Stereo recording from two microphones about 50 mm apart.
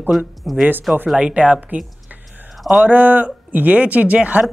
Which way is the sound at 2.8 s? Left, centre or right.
Right.